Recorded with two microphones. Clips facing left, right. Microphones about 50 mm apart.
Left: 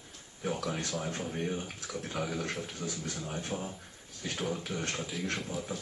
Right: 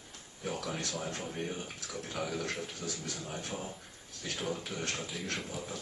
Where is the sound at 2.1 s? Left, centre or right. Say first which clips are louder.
Left 1 dB; centre.